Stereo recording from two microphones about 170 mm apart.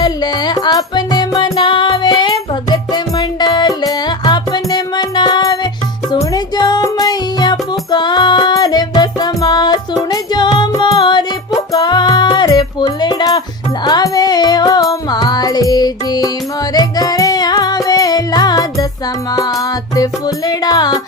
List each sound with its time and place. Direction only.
0.0 s music: 25° left (ahead or behind)
20.0 s music: 25° left (ahead or behind)